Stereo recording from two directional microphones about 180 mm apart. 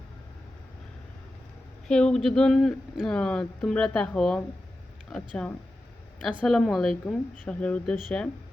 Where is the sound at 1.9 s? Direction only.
5° left (ahead or behind).